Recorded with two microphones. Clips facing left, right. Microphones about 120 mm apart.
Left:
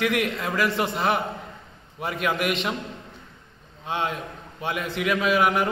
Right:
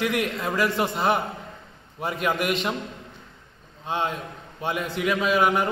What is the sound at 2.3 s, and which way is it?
Speech, 40° right (ahead or behind).